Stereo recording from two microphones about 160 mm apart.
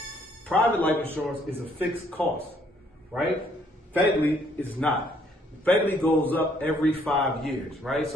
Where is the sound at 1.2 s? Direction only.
5° right (ahead or behind).